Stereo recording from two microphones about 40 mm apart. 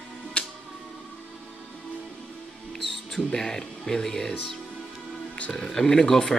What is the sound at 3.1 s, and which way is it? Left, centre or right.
Speech, centre.